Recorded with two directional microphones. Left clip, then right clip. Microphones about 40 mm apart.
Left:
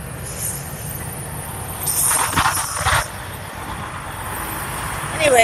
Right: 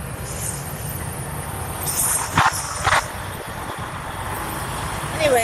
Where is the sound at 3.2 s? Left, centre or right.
Left.